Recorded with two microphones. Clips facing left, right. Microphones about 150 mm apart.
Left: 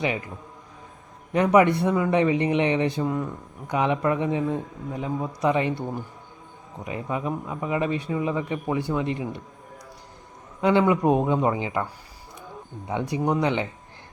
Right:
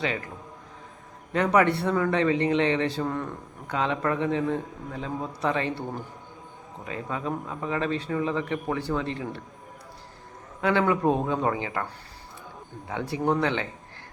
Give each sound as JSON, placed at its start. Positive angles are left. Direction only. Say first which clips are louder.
{"t": 1.3, "sound": "speech", "louder": "left 4 dB", "side_deg": 15}
{"t": 10.6, "sound": "speech", "louder": "left 3 dB", "side_deg": 15}
{"t": 12.9, "sound": "speech", "louder": "left 1 dB", "side_deg": 15}